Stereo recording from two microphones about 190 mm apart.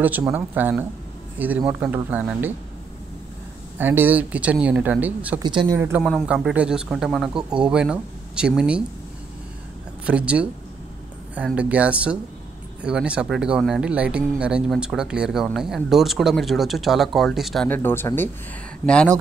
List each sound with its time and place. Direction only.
0.3 s speech: 10° right (ahead or behind)
3.7 s speech: 10° right (ahead or behind)
5.4 s speech: 25° right (ahead or behind)
5.8 s speech: 10° right (ahead or behind)
6.0 s speech: 5° left (ahead or behind)
10.0 s speech: 5° right (ahead or behind)
17.6 s speech: 10° left (ahead or behind)